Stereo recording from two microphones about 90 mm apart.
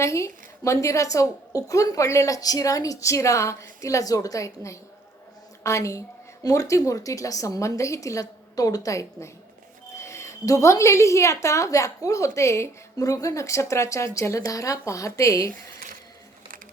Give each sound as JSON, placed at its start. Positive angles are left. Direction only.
{"t": 0.0, "sound": "a woman's voice", "side_deg": 35}